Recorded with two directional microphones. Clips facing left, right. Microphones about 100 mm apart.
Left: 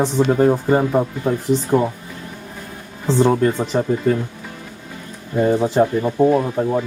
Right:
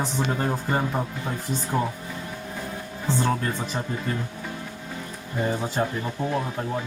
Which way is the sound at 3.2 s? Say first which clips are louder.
Left 11 dB; 20° left (ahead or behind).